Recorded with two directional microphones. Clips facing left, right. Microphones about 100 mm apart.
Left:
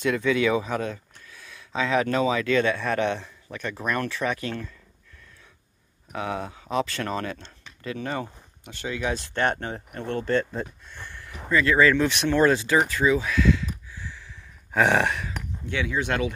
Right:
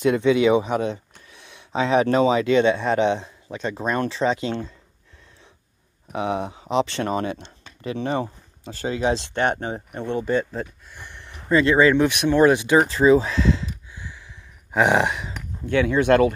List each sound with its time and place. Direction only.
0.0 s speech: 25° right (ahead or behind)
6.1 s speech: 20° right (ahead or behind)
9.3 s speech: 15° right (ahead or behind)
10.9 s a sound: 15° right (ahead or behind)
11.4 s speech: 25° right (ahead or behind)
12.8 s speech: 30° right (ahead or behind)
13.9 s a sound: 15° right (ahead or behind)
15.6 s speech: 50° right (ahead or behind)